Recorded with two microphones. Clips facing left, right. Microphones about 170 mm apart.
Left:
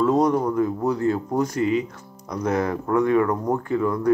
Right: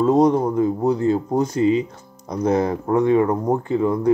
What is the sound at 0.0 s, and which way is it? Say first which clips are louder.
Speech: right 3 dB; 25° right (ahead or behind).